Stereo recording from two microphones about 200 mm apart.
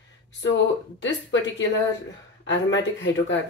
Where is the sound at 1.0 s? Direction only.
65° left (ahead or behind).